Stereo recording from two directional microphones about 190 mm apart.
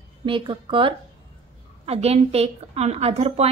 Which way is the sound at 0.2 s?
25° right (ahead or behind).